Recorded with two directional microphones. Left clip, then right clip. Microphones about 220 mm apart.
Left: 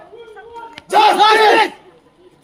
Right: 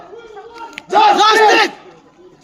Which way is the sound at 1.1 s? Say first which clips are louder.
Even; 35° right (ahead or behind).